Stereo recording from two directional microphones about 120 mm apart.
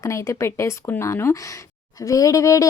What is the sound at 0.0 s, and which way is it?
Speech, 25° left (ahead or behind).